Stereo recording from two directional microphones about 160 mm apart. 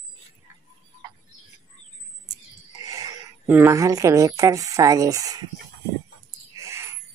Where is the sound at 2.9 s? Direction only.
20° right (ahead or behind).